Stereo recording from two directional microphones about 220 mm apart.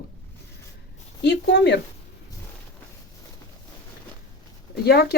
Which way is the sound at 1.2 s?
50° left (ahead or behind).